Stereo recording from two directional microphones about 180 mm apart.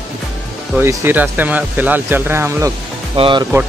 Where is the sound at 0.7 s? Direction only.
10° right (ahead or behind).